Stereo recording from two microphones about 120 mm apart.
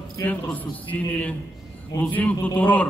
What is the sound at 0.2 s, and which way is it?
A man's voice, 15° left (ahead or behind).